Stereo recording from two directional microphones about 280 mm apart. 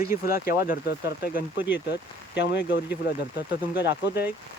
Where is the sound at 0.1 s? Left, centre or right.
Left.